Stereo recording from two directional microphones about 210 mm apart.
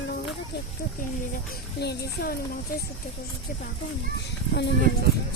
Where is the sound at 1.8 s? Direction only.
50° left (ahead or behind).